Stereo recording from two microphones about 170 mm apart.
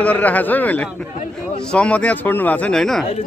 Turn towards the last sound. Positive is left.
turn(degrees=5)  # may be behind; listen again after turning